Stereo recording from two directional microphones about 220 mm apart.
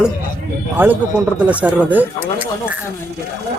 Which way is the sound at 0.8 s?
10° right (ahead or behind).